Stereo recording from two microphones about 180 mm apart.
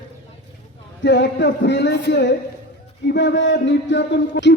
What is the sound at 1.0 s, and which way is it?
Speech, 80° left.